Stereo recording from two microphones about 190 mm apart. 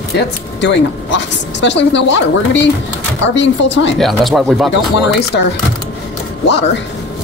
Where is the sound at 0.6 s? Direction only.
70° left (ahead or behind).